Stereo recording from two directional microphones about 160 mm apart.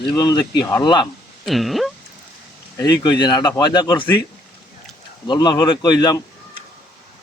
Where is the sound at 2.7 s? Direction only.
25° left (ahead or behind).